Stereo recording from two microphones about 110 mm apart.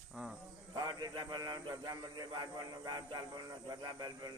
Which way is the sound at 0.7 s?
40° right (ahead or behind).